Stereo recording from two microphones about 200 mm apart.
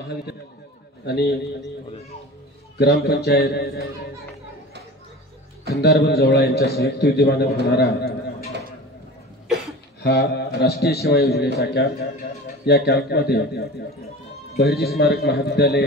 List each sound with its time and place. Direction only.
1.0 s a man's voice: 55° left (ahead or behind)
2.8 s a man's voice: 55° left (ahead or behind)
5.8 s a man's voice: 55° left (ahead or behind)
10.0 s a man's voice: 50° left (ahead or behind)